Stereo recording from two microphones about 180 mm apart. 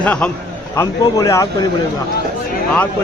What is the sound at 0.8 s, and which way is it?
Speech, 20° left (ahead or behind).